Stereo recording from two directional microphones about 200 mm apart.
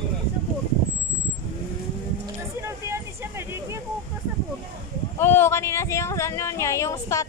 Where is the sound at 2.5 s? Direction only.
15° right (ahead or behind).